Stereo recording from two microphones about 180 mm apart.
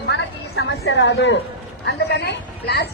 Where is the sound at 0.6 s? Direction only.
80° left.